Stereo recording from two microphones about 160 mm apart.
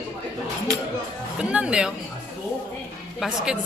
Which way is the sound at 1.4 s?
5° right (ahead or behind).